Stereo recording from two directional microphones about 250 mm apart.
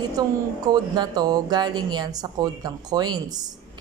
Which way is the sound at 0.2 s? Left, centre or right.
Centre.